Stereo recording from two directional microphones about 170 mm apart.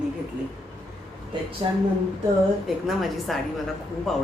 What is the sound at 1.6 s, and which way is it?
Speech, 30° right (ahead or behind).